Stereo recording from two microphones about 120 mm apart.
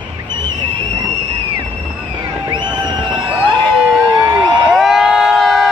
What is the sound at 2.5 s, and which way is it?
Music, 40° right (ahead or behind).